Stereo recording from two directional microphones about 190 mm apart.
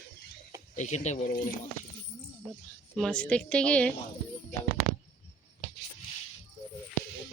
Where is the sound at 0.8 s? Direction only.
35° left (ahead or behind).